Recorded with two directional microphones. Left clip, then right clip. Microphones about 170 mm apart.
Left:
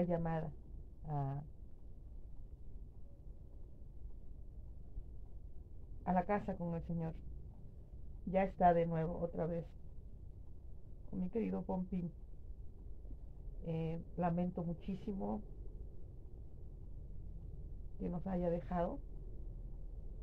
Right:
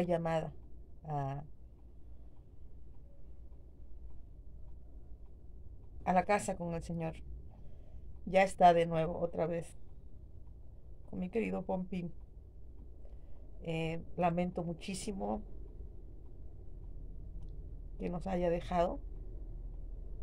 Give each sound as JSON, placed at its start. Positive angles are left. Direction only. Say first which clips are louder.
{"t": 0.0, "sound": "a woman's voice", "louder": "right 5 dB", "side_deg": -15}
{"t": 6.0, "sound": "a woman's voice", "louder": "right 6 dB", "side_deg": -15}
{"t": 8.3, "sound": "a woman's voice", "louder": "right 6 dB", "side_deg": -15}
{"t": 11.1, "sound": "a woman's voice", "louder": "right 4 dB", "side_deg": -15}
{"t": 13.6, "sound": "a woman's voice", "louder": "right 5 dB", "side_deg": -15}
{"t": 18.0, "sound": "a woman's voice", "louder": "right 5 dB", "side_deg": -15}